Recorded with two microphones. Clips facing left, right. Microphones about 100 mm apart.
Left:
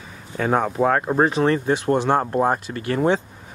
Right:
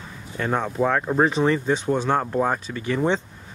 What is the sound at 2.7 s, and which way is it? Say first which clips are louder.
Speech: left 2 dB; 45° left (ahead or behind).